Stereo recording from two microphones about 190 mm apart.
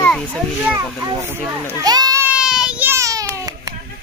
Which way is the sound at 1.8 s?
20° right (ahead or behind).